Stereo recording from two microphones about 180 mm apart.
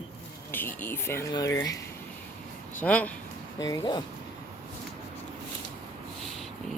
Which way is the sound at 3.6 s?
20° left (ahead or behind).